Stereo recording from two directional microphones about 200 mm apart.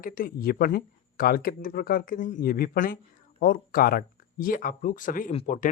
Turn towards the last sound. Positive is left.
turn(degrees=40)  # may be behind; listen again after turning